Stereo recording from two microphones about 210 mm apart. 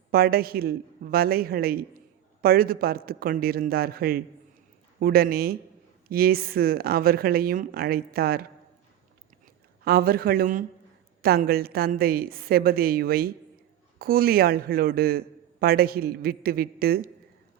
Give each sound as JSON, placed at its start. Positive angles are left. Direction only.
{"t": 0.1, "sound": "speech", "side_deg": -45}
{"t": 9.8, "sound": "speech", "side_deg": -45}